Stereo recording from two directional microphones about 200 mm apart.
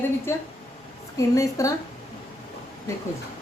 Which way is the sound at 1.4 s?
15° left (ahead or behind).